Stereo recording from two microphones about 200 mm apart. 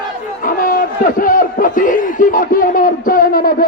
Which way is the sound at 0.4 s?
45° left (ahead or behind).